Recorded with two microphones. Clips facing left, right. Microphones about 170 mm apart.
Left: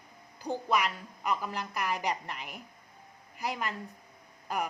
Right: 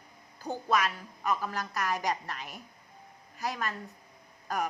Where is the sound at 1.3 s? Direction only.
15° left (ahead or behind).